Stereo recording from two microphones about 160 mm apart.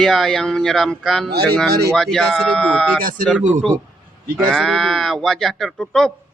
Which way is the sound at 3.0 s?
60° right (ahead or behind).